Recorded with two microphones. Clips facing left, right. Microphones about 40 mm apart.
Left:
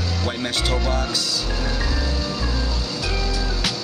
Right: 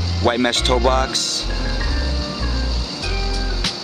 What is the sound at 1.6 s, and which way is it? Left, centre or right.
Music, centre.